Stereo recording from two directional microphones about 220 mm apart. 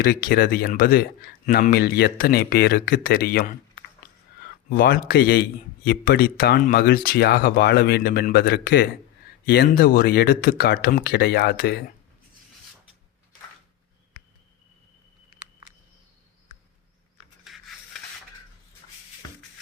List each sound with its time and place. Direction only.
0.0 s a man's voice: 45° left (ahead or behind)
4.7 s a man's voice: 40° left (ahead or behind)
17.4 s a sound: centre (ahead or behind)